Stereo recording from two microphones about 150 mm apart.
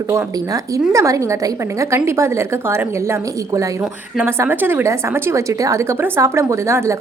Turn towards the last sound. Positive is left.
turn(degrees=-20)  # may be behind; listen again after turning